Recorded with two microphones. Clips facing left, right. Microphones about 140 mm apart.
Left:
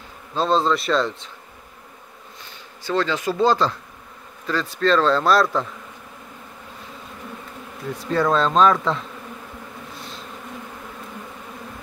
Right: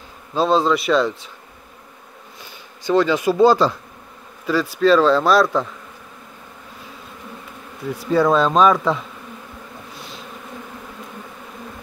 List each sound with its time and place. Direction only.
0.3 s speech: 5° right (ahead or behind)
2.8 s speech: 15° right (ahead or behind)
8.1 s speech: 5° right (ahead or behind)